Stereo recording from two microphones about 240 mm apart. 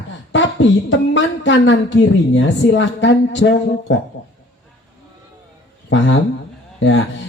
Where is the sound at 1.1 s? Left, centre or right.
Left.